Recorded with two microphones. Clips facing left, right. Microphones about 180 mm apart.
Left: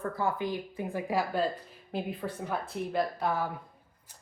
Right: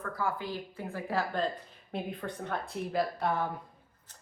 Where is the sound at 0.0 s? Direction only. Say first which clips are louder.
Left 3 dB; 25° left (ahead or behind); by 3.5 s 5° left (ahead or behind).